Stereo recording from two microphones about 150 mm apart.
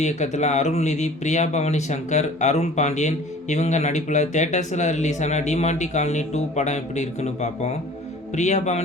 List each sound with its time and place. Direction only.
0.0 s speech: 50° left (ahead or behind)